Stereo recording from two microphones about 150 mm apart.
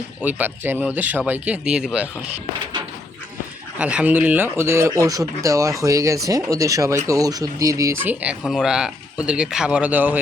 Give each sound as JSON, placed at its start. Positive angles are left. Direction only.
{"t": 0.2, "sound": "speech", "side_deg": -10}
{"t": 3.8, "sound": "speech", "side_deg": -10}
{"t": 8.2, "sound": "speech", "side_deg": -5}